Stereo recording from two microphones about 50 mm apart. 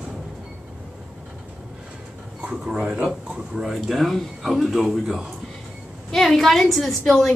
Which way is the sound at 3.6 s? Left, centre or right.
Centre.